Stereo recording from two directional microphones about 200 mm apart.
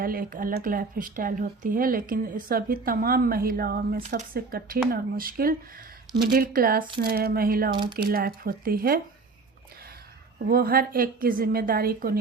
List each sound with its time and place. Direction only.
0.0 s speech: 45° right (ahead or behind)
7.7 s speech: 25° right (ahead or behind)
7.9 s speech: 50° right (ahead or behind)
10.5 s speech: 50° right (ahead or behind)